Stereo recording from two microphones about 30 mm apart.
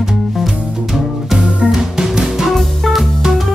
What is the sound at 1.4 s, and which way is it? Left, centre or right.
Music, right.